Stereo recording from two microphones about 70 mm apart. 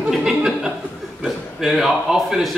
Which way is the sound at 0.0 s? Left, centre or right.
Centre.